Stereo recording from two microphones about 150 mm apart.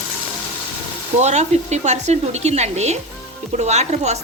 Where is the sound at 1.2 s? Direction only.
50° right (ahead or behind).